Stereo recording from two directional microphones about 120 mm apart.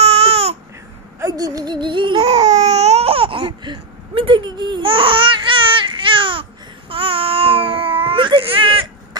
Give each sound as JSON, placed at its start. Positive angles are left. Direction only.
{"t": 0.0, "sound": "baby cry", "side_deg": -60}
{"t": 1.2, "sound": "a sound", "side_deg": -30}
{"t": 2.2, "sound": "baby cry", "side_deg": -65}